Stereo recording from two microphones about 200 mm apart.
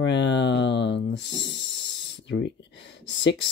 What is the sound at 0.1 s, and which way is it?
Speech, 65° left (ahead or behind).